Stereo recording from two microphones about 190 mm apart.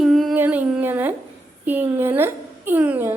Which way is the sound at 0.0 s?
Centre (ahead or behind).